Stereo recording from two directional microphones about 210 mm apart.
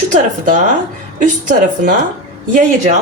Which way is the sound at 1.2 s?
40° right (ahead or behind).